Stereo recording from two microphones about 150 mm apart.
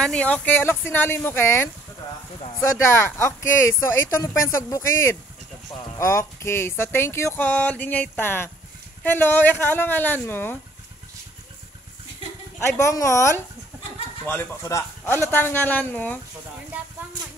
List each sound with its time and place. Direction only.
0.0 s music: 5° left (ahead or behind)
2.8 s speech: 20° left (ahead or behind)
5.9 s music: 20° left (ahead or behind)
12.5 s speech: 20° left (ahead or behind)
14.2 s music: 15° left (ahead or behind)
16.7 s horse: 10° right (ahead or behind)